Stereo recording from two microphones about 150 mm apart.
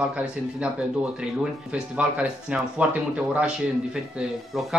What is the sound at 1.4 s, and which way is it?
Speech, 5° right (ahead or behind).